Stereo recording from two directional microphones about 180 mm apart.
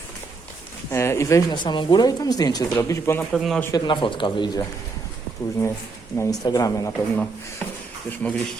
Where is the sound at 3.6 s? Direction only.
20° left (ahead or behind).